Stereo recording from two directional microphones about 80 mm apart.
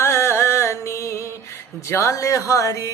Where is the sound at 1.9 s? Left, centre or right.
Left.